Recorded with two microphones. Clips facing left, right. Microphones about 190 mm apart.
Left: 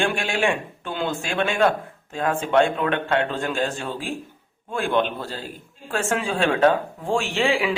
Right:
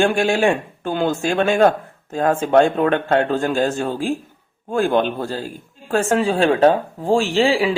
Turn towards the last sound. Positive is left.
turn(degrees=-30)  # may be behind; listen again after turning